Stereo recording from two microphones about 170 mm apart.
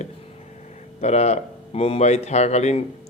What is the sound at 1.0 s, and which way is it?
A man's voice, 40° left (ahead or behind).